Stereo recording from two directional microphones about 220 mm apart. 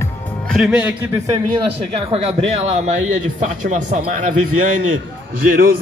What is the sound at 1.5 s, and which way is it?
Speech, 20° right (ahead or behind).